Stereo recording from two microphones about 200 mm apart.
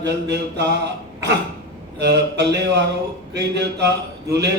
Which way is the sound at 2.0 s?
60° right (ahead or behind).